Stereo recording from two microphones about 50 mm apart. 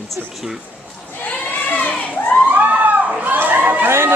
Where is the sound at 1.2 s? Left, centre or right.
Left.